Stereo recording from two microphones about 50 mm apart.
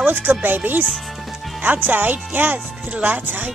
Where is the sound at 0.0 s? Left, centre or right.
Right.